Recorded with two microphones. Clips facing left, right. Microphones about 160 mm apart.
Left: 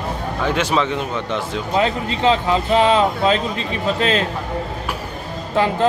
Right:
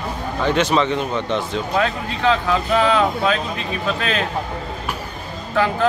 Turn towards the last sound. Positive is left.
turn(degrees=25)  # may be behind; listen again after turning